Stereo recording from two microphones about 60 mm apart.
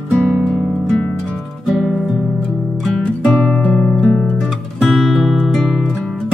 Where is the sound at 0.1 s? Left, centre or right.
Centre.